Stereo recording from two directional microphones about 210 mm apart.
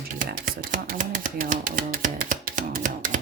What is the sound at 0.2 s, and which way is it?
Typewriter, 40° right (ahead or behind).